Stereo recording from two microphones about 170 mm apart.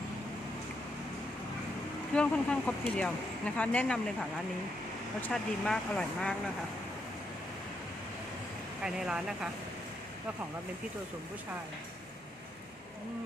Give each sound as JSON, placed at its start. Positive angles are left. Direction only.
{"t": 2.1, "sound": "speech", "side_deg": 5}
{"t": 5.2, "sound": "speech", "side_deg": 5}
{"t": 8.8, "sound": "speech", "side_deg": -5}